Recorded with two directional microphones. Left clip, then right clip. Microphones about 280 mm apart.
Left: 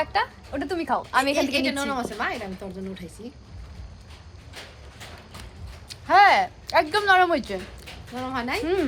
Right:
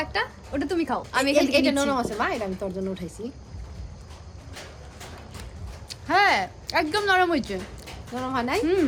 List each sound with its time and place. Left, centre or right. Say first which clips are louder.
0.0 s a woman's voice: left 3 dB; centre
1.4 s a woman's voice: right 3 dB; centre
5.9 s speech: left 4 dB; centre
8.1 s a woman's voice: right 2 dB; centre